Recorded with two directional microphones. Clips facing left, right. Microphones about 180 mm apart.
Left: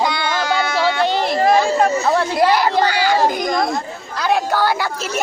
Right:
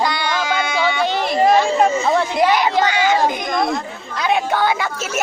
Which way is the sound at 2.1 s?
20° right (ahead or behind).